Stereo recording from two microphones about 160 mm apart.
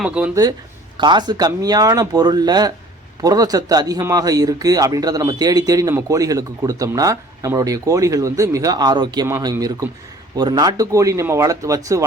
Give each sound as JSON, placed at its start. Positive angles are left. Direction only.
{"t": 0.0, "sound": "speech", "side_deg": -5}
{"t": 0.9, "sound": "speech", "side_deg": -30}